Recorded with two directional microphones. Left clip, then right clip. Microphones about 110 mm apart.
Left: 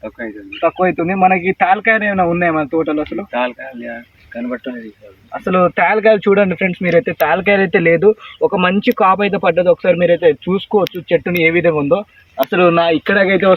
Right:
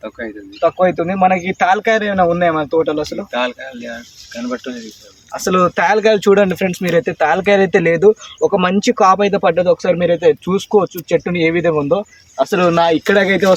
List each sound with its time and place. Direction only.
0.0 s speech: 10° right (ahead or behind)
0.6 s speech: 35° right (ahead or behind)
3.2 s speech: 20° right (ahead or behind)
5.5 s speech: 45° right (ahead or behind)
6.9 s speech: 35° right (ahead or behind)
12.7 s speech: 55° right (ahead or behind); by 13.5 s 35° right (ahead or behind)